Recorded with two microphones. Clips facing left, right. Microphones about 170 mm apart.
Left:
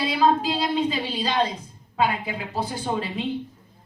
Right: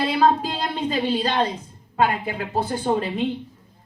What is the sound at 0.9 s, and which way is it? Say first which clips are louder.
A woman's voice: right 4 dB; 50° right (ahead or behind).